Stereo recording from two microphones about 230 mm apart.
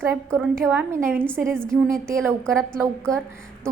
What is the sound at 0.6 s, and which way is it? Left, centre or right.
A woman's voice, centre.